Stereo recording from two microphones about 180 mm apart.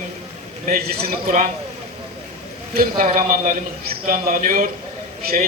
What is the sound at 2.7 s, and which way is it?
A man's voice, 55° right (ahead or behind).